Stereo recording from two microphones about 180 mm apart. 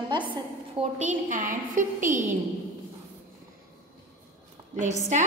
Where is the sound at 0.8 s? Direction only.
40° right (ahead or behind).